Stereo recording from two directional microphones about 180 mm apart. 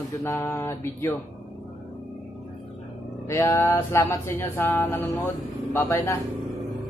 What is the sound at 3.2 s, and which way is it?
Speech, 15° left (ahead or behind).